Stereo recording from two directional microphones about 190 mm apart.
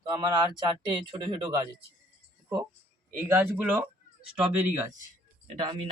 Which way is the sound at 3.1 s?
10° right (ahead or behind).